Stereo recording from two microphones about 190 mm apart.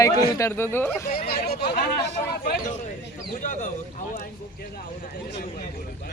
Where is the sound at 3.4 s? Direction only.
45° left (ahead or behind).